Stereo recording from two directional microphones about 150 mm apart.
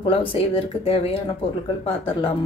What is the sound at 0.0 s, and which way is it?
Speech, 35° left (ahead or behind).